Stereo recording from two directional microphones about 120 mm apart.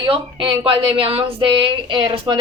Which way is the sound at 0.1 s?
45° right (ahead or behind).